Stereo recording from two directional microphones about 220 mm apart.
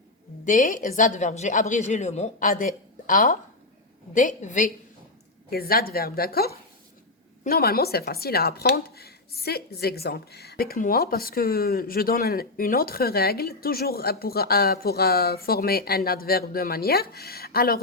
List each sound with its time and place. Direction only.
0.4 s a woman's voice: 35° left (ahead or behind)